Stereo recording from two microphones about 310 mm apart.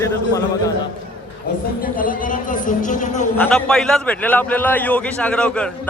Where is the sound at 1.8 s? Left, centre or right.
Left.